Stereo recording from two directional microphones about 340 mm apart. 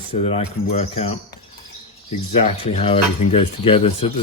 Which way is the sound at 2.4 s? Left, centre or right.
Centre.